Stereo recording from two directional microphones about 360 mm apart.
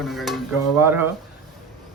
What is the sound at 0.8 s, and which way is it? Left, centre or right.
Speech, centre.